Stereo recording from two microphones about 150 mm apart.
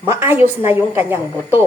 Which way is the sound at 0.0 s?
15° right (ahead or behind).